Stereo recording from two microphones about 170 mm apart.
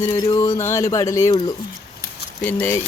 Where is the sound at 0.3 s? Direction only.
20° left (ahead or behind).